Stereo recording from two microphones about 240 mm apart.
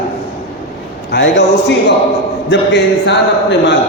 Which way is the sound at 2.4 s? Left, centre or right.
Left.